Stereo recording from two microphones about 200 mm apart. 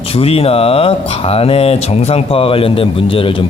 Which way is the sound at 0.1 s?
30° left (ahead or behind).